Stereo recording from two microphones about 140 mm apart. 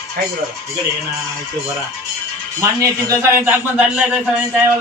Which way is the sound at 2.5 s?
20° right (ahead or behind).